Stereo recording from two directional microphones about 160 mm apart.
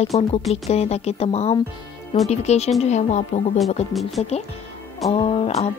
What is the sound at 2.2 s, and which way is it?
Music, 40° left (ahead or behind).